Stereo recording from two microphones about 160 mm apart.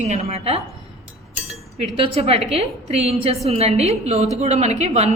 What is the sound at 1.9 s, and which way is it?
A woman's voice, 40° right (ahead or behind).